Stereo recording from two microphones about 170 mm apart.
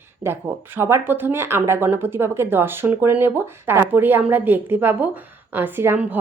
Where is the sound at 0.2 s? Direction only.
15° right (ahead or behind).